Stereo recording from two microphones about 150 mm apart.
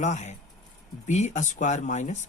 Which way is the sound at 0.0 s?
50° left (ahead or behind).